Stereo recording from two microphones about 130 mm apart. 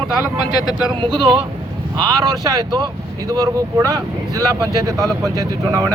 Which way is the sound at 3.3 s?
25° right (ahead or behind).